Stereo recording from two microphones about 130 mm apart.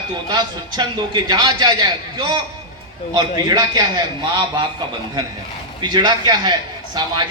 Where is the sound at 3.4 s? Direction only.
30° right (ahead or behind).